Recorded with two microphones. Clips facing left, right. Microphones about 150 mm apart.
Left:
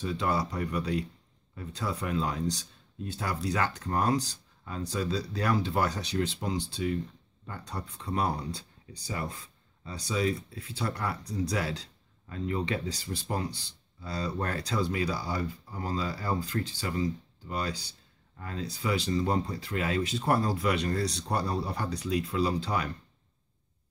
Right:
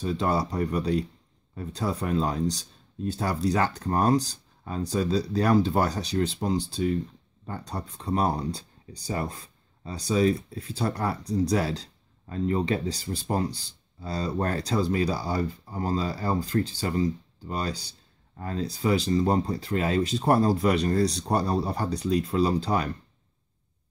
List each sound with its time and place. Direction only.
0.0 s speech: 35° right (ahead or behind)